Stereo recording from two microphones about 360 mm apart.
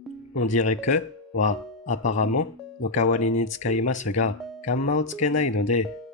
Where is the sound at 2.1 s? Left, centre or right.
Left.